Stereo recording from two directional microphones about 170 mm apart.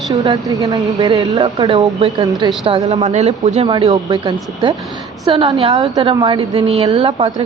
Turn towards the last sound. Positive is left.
turn(degrees=-35)  # may be behind; listen again after turning